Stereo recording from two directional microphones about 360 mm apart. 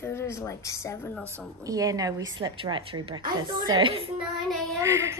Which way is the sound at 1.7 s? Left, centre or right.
Centre.